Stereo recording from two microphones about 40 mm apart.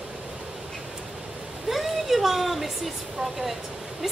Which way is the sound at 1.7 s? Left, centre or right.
Centre.